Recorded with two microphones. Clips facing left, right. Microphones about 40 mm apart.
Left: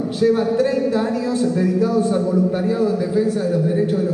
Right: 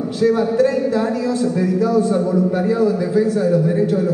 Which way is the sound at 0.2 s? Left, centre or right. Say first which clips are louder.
Right 1 dB; centre.